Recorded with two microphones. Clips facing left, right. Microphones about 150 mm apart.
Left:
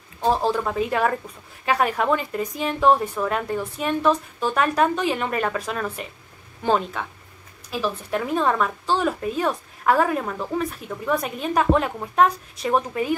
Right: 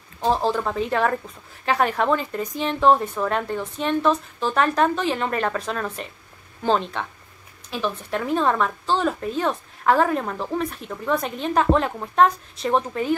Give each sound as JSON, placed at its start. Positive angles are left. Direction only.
{"t": 0.2, "sound": "a woman's voice", "side_deg": 10}